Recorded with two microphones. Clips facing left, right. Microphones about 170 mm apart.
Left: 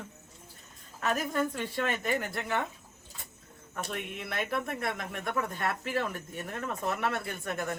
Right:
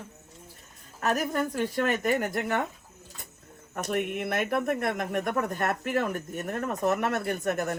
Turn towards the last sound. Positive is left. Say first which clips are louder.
# right 6 dB
turn(degrees=-40)  # may be behind; listen again after turning